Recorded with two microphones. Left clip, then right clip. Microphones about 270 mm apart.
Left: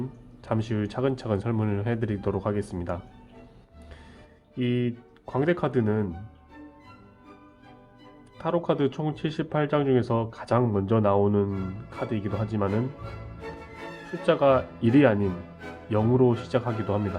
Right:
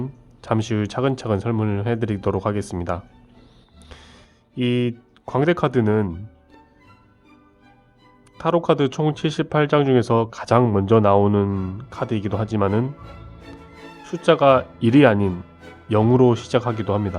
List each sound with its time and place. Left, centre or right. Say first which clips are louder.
0.4 s speech: right 6 dB; right
4.5 s speech: right 6 dB; right
8.4 s speech: right 7 dB; right
14.1 s speech: right 6 dB; right